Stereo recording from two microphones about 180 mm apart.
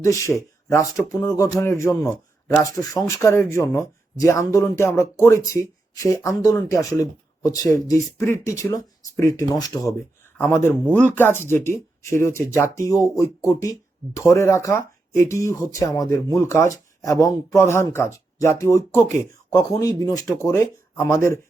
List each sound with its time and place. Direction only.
0.0 s speech: 15° left (ahead or behind)